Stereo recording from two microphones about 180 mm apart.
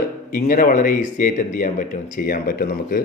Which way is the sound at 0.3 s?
50° left (ahead or behind).